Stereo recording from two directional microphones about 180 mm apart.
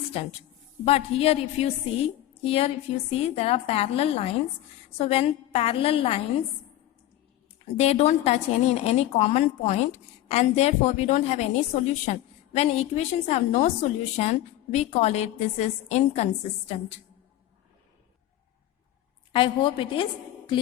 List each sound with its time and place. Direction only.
0.1 s a woman's voice: 35° left (ahead or behind)
7.8 s a woman's voice: 35° left (ahead or behind)
19.3 s a woman's voice: 30° left (ahead or behind)